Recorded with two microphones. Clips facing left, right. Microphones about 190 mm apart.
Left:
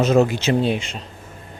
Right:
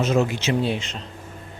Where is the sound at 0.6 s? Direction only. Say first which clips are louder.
Left 3 dB; 15° left (ahead or behind).